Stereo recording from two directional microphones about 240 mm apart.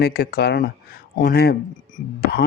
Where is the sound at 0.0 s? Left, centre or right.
Left.